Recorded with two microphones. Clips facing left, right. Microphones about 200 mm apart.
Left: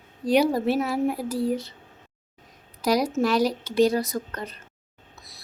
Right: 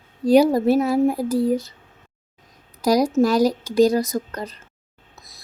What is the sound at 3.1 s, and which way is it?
A woman's voice, 40° right (ahead or behind).